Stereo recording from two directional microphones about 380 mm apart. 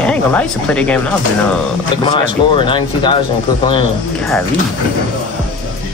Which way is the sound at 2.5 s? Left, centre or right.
Centre.